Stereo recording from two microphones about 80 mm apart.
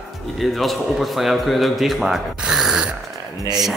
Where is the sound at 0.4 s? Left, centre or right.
Centre.